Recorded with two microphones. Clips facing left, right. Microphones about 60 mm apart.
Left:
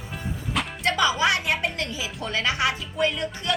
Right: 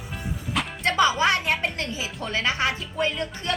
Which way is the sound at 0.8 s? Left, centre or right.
Right.